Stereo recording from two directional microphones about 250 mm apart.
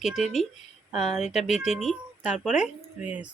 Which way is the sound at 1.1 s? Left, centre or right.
Left.